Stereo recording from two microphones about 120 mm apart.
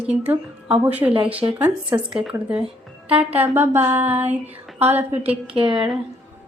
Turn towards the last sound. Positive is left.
turn(degrees=-5)  # may be behind; listen again after turning